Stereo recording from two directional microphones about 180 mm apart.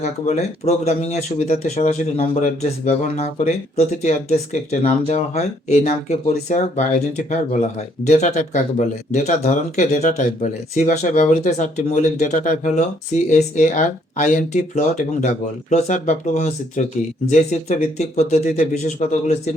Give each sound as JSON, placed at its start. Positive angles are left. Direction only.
{"t": 0.0, "sound": "speech", "side_deg": 40}